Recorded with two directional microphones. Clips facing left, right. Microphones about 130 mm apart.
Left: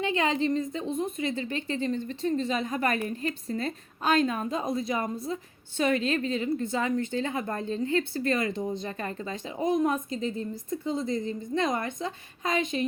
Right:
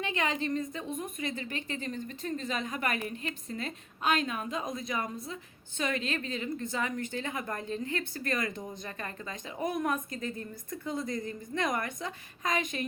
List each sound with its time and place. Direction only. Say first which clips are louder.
0.0 s a woman's voice: left 6 dB; 30° left (ahead or behind)